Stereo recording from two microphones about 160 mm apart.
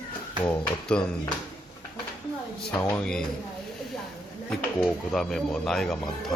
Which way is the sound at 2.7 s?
15° left (ahead or behind).